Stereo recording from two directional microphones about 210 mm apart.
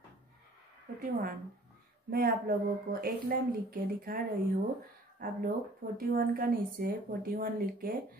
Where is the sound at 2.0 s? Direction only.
45° right (ahead or behind).